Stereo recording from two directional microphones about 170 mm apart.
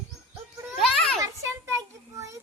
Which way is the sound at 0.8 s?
Centre (ahead or behind).